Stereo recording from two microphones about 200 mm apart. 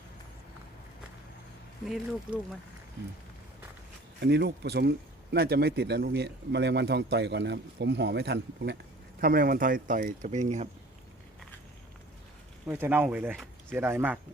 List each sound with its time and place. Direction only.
4.2 s speech: 55° right (ahead or behind)
9.2 s speech: 50° right (ahead or behind)
12.6 s speech: 10° right (ahead or behind)